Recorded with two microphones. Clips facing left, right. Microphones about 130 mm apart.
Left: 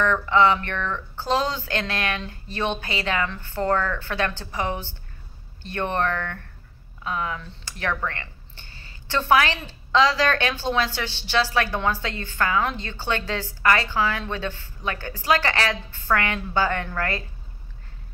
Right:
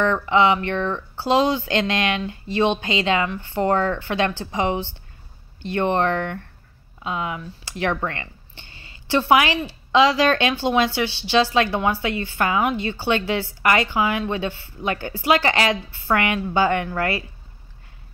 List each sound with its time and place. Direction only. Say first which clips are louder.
0.0 s a woman's voice: right 1 dB; 15° right (ahead or behind)